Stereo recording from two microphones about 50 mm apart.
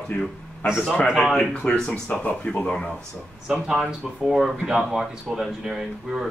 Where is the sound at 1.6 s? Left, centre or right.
Left.